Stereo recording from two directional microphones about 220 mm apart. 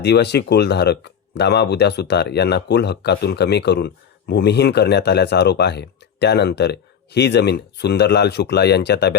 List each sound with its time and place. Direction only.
0.0 s speech: 50° left (ahead or behind)